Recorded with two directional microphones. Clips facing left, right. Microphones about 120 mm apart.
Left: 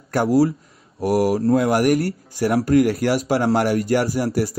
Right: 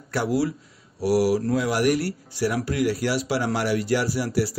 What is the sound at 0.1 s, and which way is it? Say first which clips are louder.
Speech: left 7 dB; 45° left (ahead or behind).